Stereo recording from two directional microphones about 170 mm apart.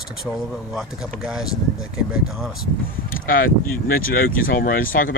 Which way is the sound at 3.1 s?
55° left (ahead or behind).